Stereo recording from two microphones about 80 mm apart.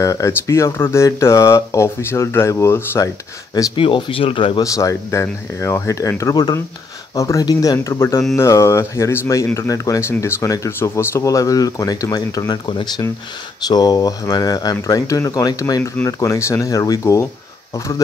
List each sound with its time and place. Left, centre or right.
0.0 s speech: left
3.7 s speech: left
4.6 s speech: left
7.9 s speech: left
11.2 s speech: left
13.6 s speech: left